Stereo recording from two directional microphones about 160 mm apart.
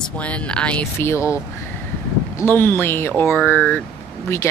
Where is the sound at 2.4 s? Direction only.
15° left (ahead or behind).